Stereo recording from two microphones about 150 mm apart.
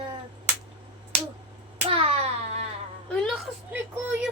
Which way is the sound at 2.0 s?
40° right (ahead or behind).